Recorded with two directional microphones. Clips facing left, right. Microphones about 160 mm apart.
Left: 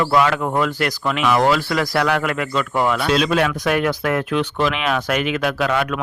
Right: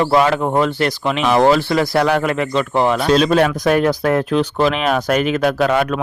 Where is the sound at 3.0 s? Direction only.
40° right (ahead or behind).